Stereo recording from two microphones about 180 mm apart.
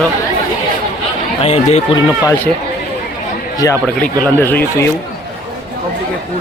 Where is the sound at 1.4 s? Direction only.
35° left (ahead or behind).